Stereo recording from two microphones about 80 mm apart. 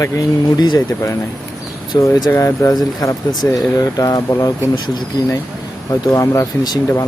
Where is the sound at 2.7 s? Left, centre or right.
Left.